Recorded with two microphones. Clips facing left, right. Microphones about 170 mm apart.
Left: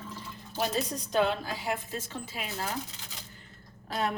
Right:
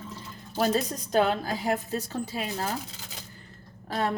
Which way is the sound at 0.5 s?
40° right (ahead or behind).